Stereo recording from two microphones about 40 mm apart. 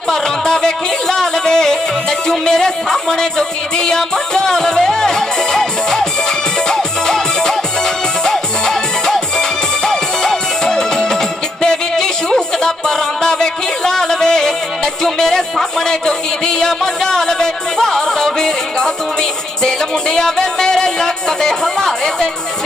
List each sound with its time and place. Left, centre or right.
0.1 s music: centre
15.0 s speech: centre
19.6 s music: centre